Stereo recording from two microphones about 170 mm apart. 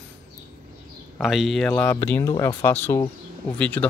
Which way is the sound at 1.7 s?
15° left (ahead or behind).